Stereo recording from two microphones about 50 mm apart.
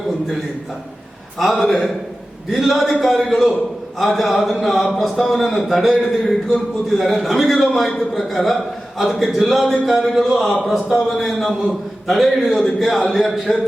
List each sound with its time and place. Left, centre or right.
1.4 s a man's voice: centre